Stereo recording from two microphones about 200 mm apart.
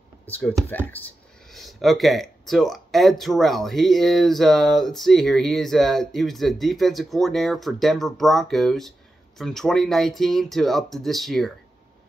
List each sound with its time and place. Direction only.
0.3 s speech: 5° left (ahead or behind)